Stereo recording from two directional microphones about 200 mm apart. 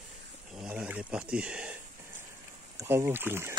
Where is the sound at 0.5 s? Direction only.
5° right (ahead or behind).